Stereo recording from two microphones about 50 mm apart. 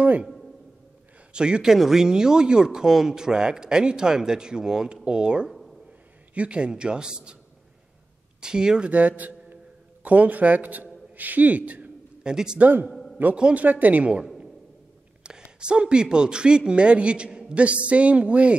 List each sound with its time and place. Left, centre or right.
1.3 s speech: centre
5.5 s a sound: centre
6.3 s speech: right
8.4 s speech: centre
8.9 s a man's voice: right
11.1 s a sound: right
12.3 s speech: centre
12.5 s speech: right
13.4 s speech: right
13.7 s speech: right
15.2 s speech: centre